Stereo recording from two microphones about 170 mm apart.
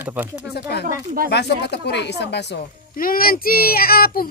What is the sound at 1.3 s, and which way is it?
Speech, 80° left.